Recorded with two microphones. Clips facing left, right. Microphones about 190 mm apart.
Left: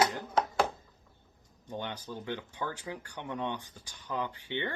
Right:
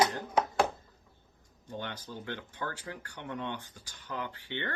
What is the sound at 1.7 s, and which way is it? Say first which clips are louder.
Speech: left 2 dB; 15° left (ahead or behind).